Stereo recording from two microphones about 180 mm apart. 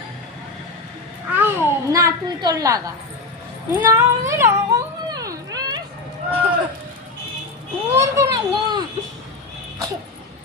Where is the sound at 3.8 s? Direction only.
15° right (ahead or behind).